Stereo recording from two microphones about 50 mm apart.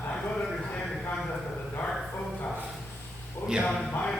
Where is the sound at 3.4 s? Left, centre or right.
Left.